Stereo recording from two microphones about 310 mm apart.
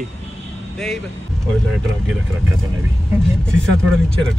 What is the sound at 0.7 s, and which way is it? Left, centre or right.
Speech, centre.